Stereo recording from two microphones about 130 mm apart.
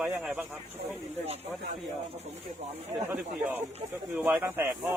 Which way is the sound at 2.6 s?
55° right (ahead or behind).